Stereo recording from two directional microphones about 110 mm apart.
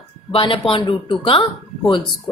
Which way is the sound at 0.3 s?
55° left (ahead or behind).